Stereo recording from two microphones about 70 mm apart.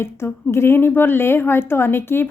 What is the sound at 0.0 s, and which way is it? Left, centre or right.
A woman's voice, left.